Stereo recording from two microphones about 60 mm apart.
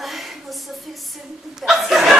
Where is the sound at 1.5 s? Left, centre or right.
Centre.